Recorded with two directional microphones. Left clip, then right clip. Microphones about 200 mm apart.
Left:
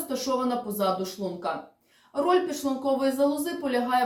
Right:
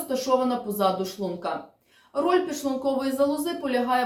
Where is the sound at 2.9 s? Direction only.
5° right (ahead or behind).